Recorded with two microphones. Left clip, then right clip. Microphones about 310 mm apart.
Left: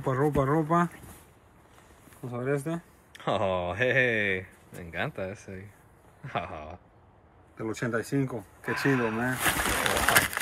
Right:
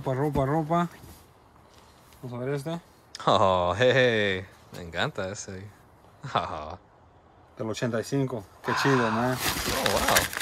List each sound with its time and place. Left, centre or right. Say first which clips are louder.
0.1 s speech: left 1 dB; centre
2.3 s speech: left 1 dB; centre
6.3 s speech: right 5 dB; centre
10.0 s a sound: even; centre